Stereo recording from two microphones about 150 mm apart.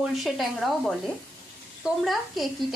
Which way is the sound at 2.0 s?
Centre (ahead or behind).